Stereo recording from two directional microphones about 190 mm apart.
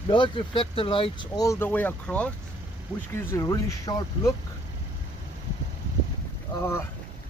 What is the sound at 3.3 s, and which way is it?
Speech, 15° left (ahead or behind).